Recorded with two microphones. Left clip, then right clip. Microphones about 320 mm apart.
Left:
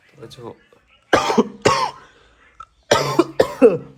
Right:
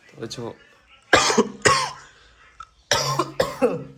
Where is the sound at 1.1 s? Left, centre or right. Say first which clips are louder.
Left 1 dB; centre.